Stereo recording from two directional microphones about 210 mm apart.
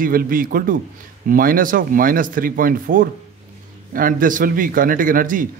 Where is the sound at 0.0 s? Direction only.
45° right (ahead or behind).